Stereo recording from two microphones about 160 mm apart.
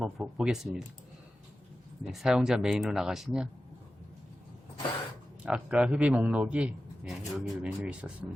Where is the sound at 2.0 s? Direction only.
Centre (ahead or behind).